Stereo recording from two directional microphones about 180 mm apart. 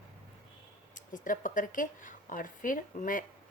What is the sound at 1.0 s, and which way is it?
Speech, 45° left (ahead or behind).